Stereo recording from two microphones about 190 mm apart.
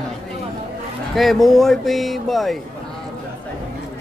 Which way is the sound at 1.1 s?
Centre (ahead or behind).